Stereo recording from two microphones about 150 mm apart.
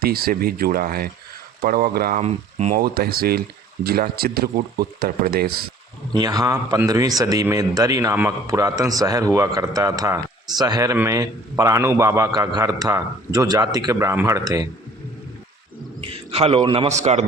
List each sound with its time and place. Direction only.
0.0 s speech: 90° right
2.1 s speech: 50° right (ahead or behind)
2.7 s speech: 90° right
6.1 s a man's voice: 25° right (ahead or behind)
16.0 s a man's voice: 40° right (ahead or behind)
16.9 s speech: 50° right (ahead or behind)